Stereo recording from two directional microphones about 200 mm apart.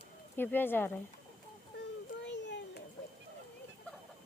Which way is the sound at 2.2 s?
60° left (ahead or behind).